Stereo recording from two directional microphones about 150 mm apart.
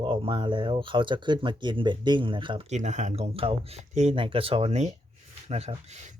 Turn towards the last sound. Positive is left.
turn(degrees=-50)  # may be behind; listen again after turning